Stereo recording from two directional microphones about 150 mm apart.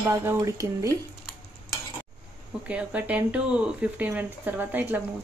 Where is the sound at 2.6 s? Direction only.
10° right (ahead or behind).